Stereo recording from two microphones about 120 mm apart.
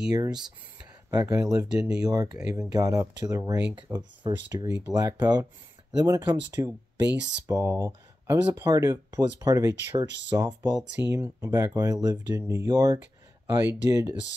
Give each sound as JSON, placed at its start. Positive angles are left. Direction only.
{"t": 0.1, "sound": "speech", "side_deg": -35}